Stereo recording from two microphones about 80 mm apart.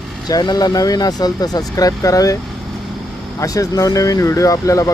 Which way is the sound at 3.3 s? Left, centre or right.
Left.